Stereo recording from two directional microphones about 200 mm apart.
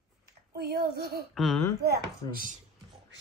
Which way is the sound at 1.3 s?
Centre (ahead or behind).